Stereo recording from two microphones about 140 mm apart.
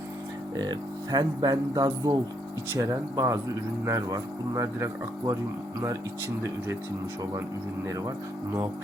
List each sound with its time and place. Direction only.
0.5 s speech: 30° right (ahead or behind)